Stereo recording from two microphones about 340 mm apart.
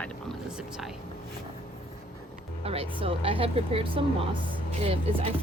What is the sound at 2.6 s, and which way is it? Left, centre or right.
Speech, centre.